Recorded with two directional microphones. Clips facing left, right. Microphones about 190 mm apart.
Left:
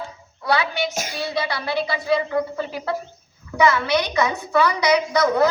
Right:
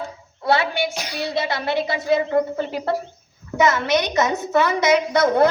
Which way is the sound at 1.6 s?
20° right (ahead or behind).